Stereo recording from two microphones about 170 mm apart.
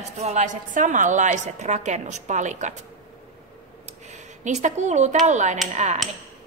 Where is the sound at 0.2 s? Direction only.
45° right (ahead or behind).